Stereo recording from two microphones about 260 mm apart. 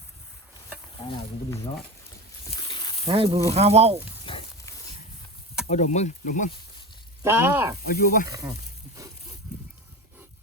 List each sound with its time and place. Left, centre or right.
2.6 s snake: centre
3.1 s speech: right
4.3 s a sound: centre
5.6 s speech: left
7.2 s speech: centre
7.9 s speech: left
8.3 s speech: centre